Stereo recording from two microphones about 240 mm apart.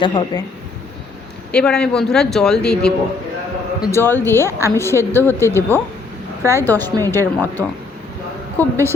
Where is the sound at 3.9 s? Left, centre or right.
Centre.